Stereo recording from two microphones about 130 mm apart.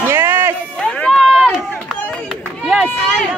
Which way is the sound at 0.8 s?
5° left (ahead or behind).